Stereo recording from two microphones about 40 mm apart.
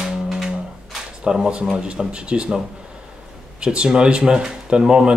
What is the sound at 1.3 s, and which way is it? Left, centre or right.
Speech, right.